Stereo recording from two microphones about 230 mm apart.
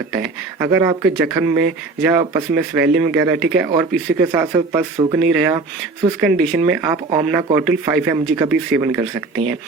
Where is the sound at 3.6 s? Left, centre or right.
Centre.